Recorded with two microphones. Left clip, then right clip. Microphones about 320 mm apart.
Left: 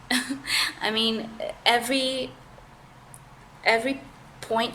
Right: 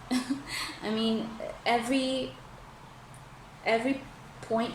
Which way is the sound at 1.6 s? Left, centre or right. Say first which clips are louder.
Left 5 dB; left.